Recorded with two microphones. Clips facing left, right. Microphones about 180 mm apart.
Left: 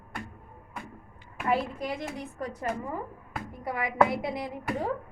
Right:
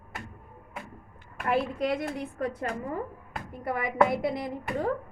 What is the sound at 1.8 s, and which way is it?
Speech, 65° right (ahead or behind).